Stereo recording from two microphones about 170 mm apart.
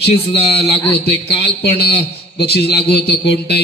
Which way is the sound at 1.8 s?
70° left (ahead or behind).